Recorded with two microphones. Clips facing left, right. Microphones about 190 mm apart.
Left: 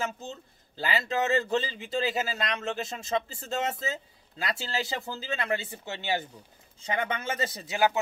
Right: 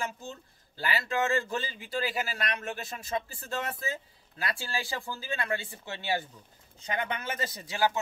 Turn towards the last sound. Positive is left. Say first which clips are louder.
# left 3 dB
turn(degrees=20)  # may be behind; listen again after turning